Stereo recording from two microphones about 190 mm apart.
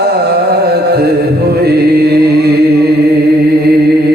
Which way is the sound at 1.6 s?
55° right (ahead or behind).